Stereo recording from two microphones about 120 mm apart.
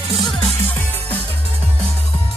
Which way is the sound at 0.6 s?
15° left (ahead or behind).